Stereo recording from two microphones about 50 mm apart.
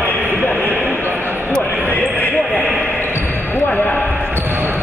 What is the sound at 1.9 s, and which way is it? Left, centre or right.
Basketball bounce, left.